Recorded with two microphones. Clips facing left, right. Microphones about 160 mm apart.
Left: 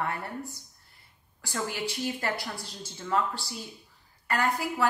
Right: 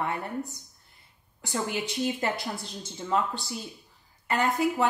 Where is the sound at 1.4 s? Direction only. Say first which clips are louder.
Right 2 dB; 20° right (ahead or behind).